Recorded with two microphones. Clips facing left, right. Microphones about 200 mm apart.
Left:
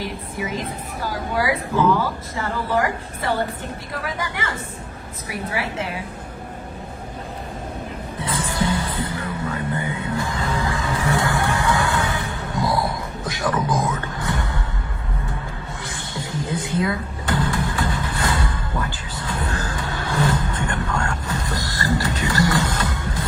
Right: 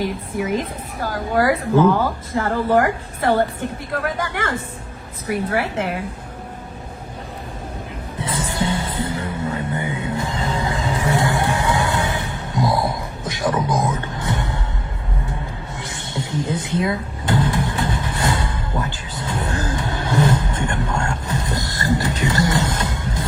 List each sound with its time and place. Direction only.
1.4 s a woman's voice: 50° right (ahead or behind)
8.2 s music: 25° right (ahead or behind)
15.8 s power windows: 20° right (ahead or behind)